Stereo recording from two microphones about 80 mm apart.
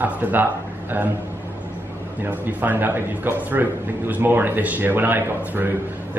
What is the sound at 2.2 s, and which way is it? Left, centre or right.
A man's voice, right.